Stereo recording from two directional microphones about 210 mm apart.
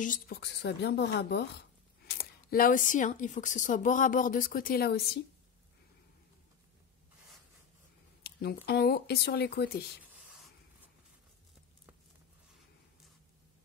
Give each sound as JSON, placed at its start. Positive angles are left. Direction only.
{"t": 0.0, "sound": "a woman's voice", "side_deg": 45}
{"t": 8.2, "sound": "a sound", "side_deg": 50}
{"t": 8.6, "sound": "a woman's voice", "side_deg": 45}